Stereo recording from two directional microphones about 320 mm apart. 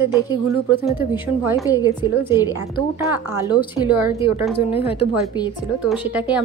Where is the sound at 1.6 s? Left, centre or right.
Centre.